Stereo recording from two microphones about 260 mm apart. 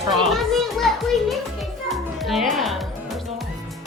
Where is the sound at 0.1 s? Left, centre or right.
Centre.